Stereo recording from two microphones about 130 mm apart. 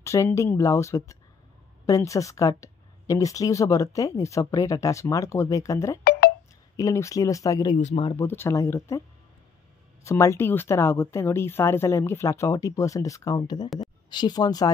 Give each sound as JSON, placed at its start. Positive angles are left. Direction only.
{"t": 0.0, "sound": "speech", "side_deg": 20}
{"t": 7.7, "sound": "speech", "side_deg": 50}
{"t": 8.1, "sound": "speech", "side_deg": 20}
{"t": 10.0, "sound": "speech", "side_deg": 20}